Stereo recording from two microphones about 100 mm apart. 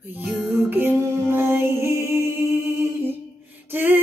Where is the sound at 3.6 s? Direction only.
20° right (ahead or behind).